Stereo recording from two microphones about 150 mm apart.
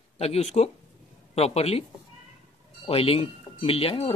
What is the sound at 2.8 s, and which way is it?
Speech, 40° left (ahead or behind).